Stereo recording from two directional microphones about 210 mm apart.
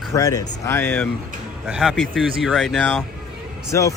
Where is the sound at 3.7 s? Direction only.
15° left (ahead or behind).